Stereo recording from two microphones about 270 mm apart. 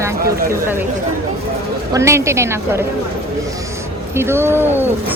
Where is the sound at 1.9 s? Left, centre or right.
Centre.